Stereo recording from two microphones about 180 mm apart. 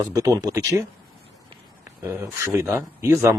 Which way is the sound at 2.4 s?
15° right (ahead or behind).